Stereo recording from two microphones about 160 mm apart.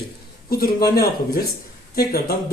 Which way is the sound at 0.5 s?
70° left (ahead or behind).